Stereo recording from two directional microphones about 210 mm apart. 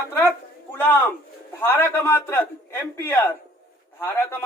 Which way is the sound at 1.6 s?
10° left (ahead or behind).